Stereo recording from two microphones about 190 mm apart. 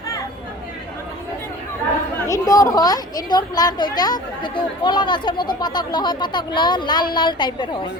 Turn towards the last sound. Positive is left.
turn(degrees=25)  # may be behind; listen again after turning